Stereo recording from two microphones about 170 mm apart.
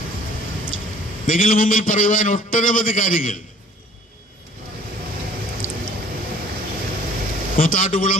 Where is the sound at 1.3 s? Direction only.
50° left (ahead or behind).